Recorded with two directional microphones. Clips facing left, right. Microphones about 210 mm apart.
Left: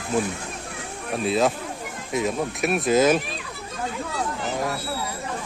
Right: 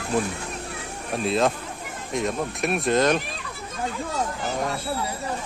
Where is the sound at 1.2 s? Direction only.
Centre (ahead or behind).